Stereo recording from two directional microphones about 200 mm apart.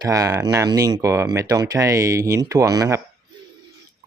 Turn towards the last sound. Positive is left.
turn(degrees=-15)  # may be behind; listen again after turning